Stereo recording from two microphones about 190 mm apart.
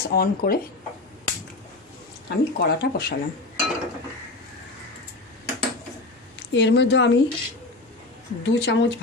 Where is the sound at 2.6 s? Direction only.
60° left (ahead or behind).